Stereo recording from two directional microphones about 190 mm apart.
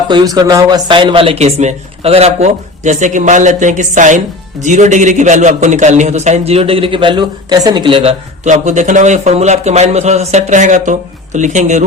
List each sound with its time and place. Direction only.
0.1 s a man's voice: 25° right (ahead or behind)
8.4 s a man's voice: 40° right (ahead or behind)